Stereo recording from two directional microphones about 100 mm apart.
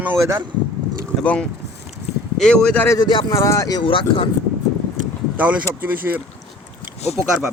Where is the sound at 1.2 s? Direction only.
10° left (ahead or behind).